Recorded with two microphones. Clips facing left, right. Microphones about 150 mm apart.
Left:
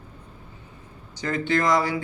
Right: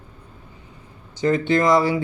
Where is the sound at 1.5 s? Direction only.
20° right (ahead or behind).